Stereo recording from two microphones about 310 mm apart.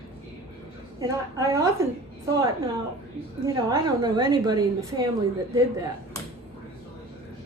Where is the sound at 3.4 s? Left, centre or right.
Centre.